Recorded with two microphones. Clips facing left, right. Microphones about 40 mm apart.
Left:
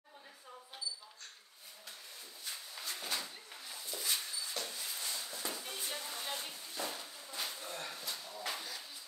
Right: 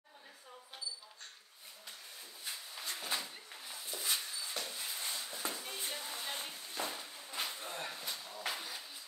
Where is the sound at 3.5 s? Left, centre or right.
Centre.